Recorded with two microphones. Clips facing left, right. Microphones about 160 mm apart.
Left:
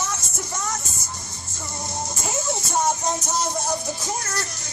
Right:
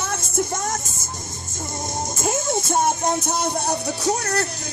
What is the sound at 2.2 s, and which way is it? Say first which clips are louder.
Music: right 6 dB; 50° right (ahead or behind).